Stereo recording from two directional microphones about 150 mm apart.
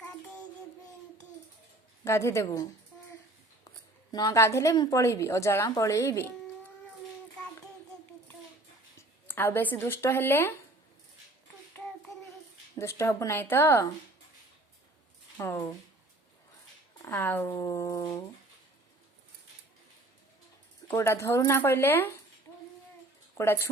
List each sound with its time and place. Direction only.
2.0 s a woman's voice: 20° left (ahead or behind)
4.1 s a woman's voice: 25° left (ahead or behind)
9.0 s speech: 15° left (ahead or behind)
12.7 s speech: 20° left (ahead or behind)
15.4 s a woman's voice: 20° left (ahead or behind)
17.0 s a woman's voice: 15° left (ahead or behind)
20.8 s speech: 15° left (ahead or behind)
23.4 s speech: 20° left (ahead or behind)